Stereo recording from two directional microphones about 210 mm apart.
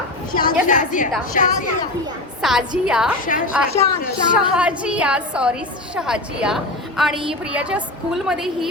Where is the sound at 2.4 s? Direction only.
Centre (ahead or behind).